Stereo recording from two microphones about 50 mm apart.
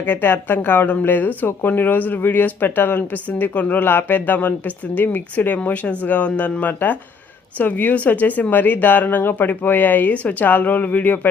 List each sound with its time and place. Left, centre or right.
0.0 s speech: left